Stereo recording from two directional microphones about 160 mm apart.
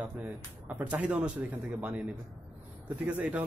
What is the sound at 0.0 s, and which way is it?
A man's voice, 10° right (ahead or behind).